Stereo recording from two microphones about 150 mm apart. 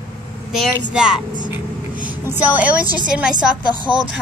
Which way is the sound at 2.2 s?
10° right (ahead or behind).